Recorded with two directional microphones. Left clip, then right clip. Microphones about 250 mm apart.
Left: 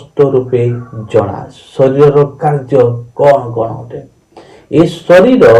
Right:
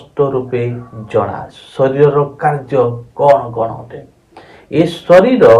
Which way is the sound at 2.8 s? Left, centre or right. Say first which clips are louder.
Left 4 dB; right.